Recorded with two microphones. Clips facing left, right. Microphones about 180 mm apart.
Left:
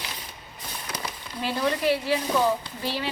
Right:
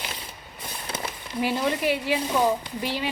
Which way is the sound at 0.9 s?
30° right (ahead or behind).